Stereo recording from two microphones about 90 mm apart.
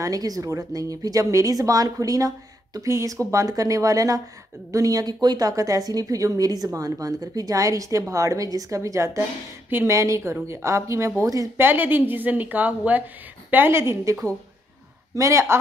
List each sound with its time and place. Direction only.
0.0 s speech: 45° right (ahead or behind)
11.5 s a woman's voice: 25° right (ahead or behind)
15.1 s speech: 35° right (ahead or behind)